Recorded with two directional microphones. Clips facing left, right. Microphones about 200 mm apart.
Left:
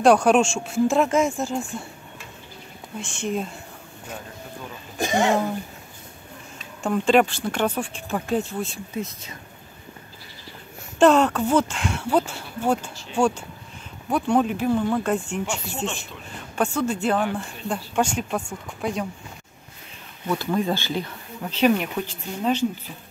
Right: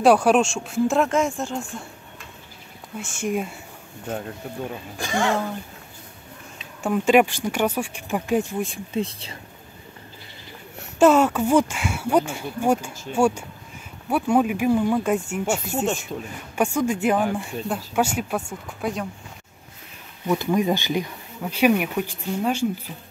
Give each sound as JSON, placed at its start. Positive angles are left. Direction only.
{"t": 0.0, "sound": "speech", "side_deg": -5}
{"t": 3.0, "sound": "speech", "side_deg": -10}
{"t": 4.9, "sound": "speech", "side_deg": 20}
{"t": 6.8, "sound": "speech", "side_deg": -10}
{"t": 8.9, "sound": "speech", "side_deg": -30}
{"t": 11.0, "sound": "speech", "side_deg": -5}
{"t": 15.4, "sound": "speech", "side_deg": -45}
{"t": 16.5, "sound": "speech", "side_deg": -10}
{"t": 20.2, "sound": "speech", "side_deg": -15}